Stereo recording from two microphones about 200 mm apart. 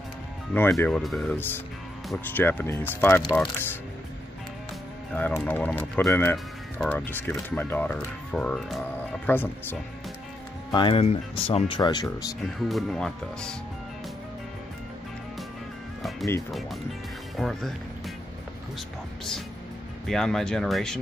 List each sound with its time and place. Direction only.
0.6 s speech: 10° left (ahead or behind)
5.1 s speech: 10° left (ahead or behind)
10.7 s speech: 25° left (ahead or behind)
12.5 s speech: centre (ahead or behind)
17.4 s speech: centre (ahead or behind)
20.1 s speech: centre (ahead or behind)